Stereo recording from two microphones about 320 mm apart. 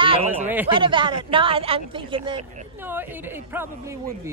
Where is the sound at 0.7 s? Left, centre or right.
Centre.